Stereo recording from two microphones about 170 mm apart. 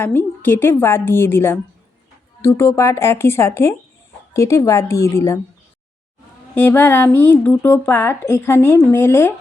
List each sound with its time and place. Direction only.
0.0 s speech: 10° left (ahead or behind)
6.5 s speech: 15° left (ahead or behind)